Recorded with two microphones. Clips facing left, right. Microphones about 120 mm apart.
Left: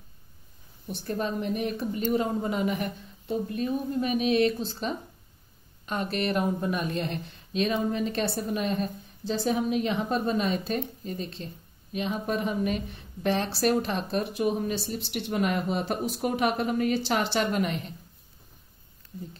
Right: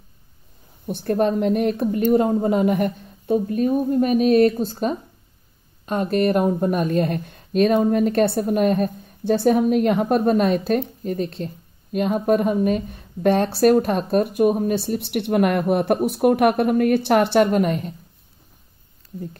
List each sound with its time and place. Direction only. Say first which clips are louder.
0.8 s speech: right 10 dB; 55° right (ahead or behind)